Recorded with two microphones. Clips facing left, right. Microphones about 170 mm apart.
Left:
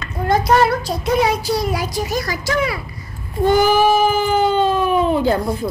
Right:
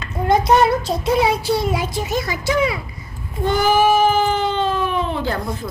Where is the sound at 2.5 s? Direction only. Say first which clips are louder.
Right 1 dB; 15° right (ahead or behind).